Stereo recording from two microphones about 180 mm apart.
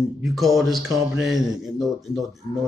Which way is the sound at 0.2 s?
Centre (ahead or behind).